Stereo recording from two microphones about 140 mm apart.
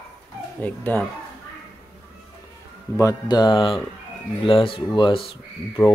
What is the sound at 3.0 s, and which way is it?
Speech, 25° left (ahead or behind).